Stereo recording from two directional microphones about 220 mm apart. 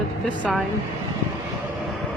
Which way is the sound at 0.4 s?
Centre (ahead or behind).